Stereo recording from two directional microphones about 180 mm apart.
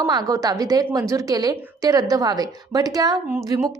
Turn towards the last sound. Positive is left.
turn(degrees=-20)  # may be behind; listen again after turning